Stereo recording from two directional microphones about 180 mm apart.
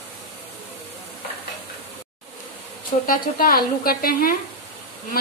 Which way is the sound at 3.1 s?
50° left (ahead or behind).